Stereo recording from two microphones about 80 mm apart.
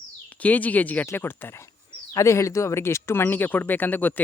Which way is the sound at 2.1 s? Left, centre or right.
Left.